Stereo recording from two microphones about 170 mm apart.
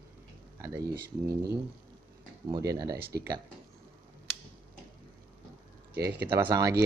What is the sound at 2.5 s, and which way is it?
Speech, 20° right (ahead or behind).